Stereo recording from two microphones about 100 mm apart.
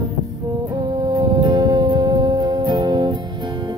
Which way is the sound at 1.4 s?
50° right (ahead or behind).